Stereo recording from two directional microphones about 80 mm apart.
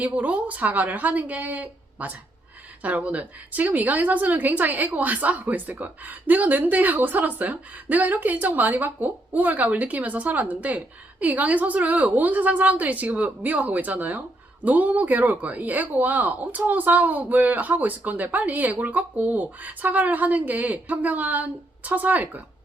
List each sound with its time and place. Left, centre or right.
0.0 s a woman's voice: centre